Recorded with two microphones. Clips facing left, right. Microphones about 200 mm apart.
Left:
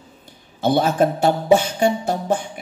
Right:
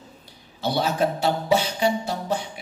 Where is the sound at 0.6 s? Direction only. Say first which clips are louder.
Left 6 dB; 50° left (ahead or behind).